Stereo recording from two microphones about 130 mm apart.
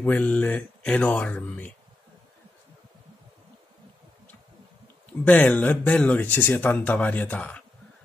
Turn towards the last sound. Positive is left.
turn(degrees=10)  # may be behind; listen again after turning